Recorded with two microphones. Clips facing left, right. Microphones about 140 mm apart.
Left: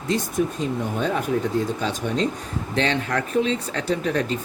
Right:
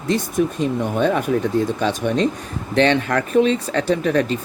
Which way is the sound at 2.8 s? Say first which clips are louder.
Right 7 dB; 70° right (ahead or behind).